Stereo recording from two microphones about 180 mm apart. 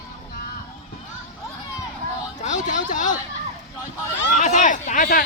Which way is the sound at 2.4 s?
40° left (ahead or behind).